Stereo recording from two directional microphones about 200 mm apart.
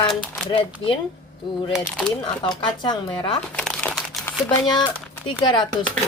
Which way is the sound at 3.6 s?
5° left (ahead or behind).